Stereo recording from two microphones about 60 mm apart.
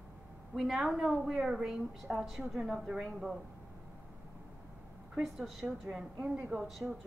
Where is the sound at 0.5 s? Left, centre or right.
Centre.